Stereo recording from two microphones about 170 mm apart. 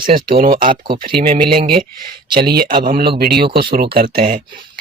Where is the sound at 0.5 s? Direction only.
30° right (ahead or behind).